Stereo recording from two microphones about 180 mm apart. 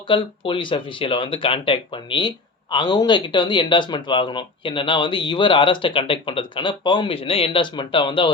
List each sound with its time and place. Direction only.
0.1 s speech: 30° left (ahead or behind)